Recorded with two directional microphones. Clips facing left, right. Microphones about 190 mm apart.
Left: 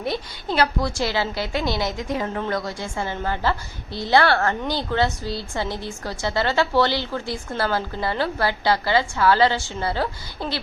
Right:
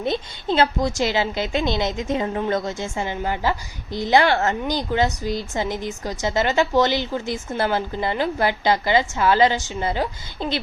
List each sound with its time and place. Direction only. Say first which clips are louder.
0.0 s a woman's voice: right 3 dB; 20° right (ahead or behind)